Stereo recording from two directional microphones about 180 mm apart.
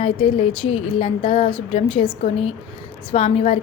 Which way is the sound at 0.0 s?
30° left (ahead or behind).